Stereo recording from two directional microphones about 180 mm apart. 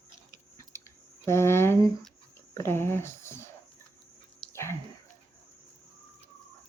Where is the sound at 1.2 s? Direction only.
15° left (ahead or behind).